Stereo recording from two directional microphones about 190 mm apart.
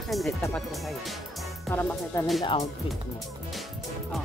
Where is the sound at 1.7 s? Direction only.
10° left (ahead or behind).